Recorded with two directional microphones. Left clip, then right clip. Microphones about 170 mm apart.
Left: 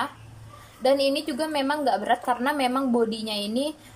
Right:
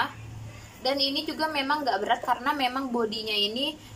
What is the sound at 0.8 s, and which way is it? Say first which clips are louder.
A woman's voice: left 5 dB; 45° left (ahead or behind).